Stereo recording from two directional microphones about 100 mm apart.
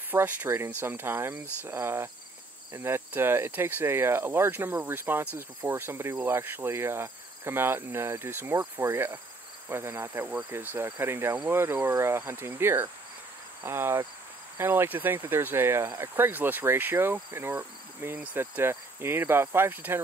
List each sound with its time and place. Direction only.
0.1 s insect: 20° right (ahead or behind)